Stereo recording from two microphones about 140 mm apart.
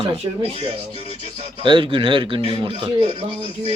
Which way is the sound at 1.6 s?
35° right (ahead or behind).